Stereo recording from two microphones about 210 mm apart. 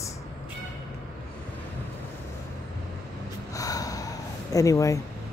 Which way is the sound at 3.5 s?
15° left (ahead or behind).